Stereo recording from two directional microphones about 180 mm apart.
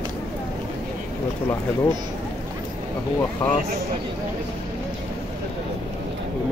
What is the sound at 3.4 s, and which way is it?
Speech, 25° left (ahead or behind).